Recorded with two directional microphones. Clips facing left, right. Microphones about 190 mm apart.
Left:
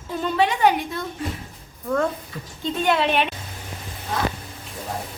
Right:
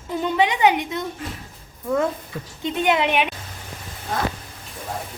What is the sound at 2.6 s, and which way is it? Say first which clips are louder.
Speech: right 1 dB; 20° right (ahead or behind).